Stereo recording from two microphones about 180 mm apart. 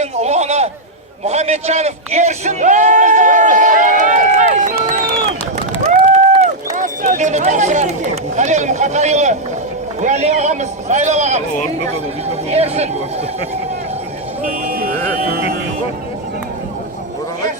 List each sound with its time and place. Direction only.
0.0 s a man's voice: 40° right (ahead or behind)
12.5 s speech: 35° right (ahead or behind)
14.4 s speech: 50° right (ahead or behind)